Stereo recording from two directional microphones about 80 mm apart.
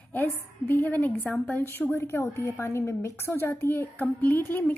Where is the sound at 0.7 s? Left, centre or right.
Left.